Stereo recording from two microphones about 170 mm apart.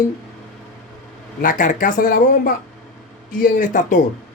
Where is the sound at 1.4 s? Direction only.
50° left (ahead or behind).